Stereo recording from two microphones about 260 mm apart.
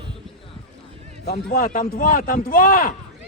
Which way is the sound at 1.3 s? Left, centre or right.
Left.